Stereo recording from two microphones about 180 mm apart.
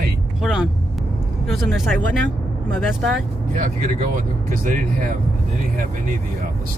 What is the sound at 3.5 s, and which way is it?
Speech, 45° right (ahead or behind).